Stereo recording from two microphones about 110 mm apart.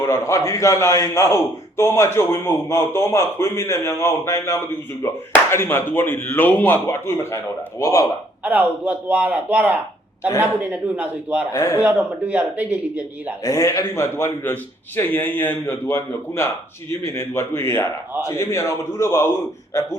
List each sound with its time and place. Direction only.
0.0 s a man's voice: 25° left (ahead or behind)
8.4 s a man's voice: 15° right (ahead or behind)
11.5 s a man's voice: 25° left (ahead or behind)
11.8 s a man's voice: 15° right (ahead or behind)
13.4 s a man's voice: 30° left (ahead or behind)